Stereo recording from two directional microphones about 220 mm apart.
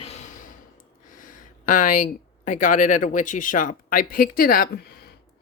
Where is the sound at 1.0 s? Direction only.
40° left (ahead or behind).